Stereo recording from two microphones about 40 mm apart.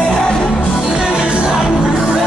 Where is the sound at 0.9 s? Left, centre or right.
Right.